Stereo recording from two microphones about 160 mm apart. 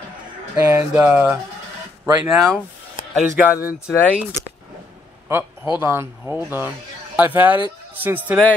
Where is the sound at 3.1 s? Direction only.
10° right (ahead or behind).